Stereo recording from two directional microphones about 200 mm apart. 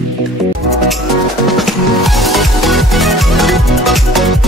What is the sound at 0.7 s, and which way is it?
Music, centre (ahead or behind).